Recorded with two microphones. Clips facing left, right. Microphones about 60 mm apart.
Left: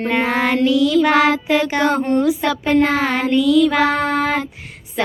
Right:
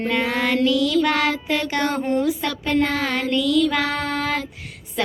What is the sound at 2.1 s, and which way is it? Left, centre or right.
Speech, left.